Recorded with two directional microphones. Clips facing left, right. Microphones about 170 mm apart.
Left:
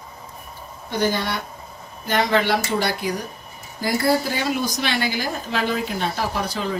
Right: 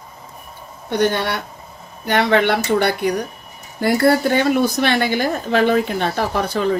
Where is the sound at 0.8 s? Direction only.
65° right (ahead or behind).